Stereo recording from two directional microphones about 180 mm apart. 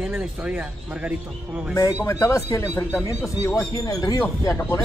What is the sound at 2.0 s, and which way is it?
Speech, 15° left (ahead or behind).